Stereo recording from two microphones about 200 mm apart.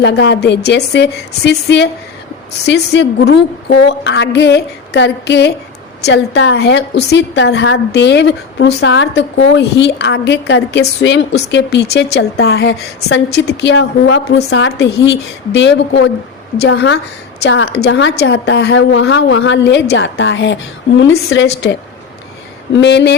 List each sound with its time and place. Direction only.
0.0 s a woman's voice: 60° left (ahead or behind)